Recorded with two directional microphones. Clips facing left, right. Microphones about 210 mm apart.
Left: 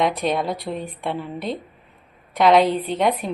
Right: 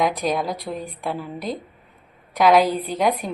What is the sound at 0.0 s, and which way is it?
A woman's voice, centre (ahead or behind).